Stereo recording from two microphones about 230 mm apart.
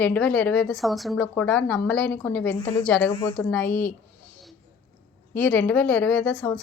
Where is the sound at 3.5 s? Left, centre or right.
Centre.